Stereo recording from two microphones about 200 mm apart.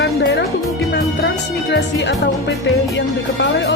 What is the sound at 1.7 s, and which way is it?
Speech, 60° left (ahead or behind).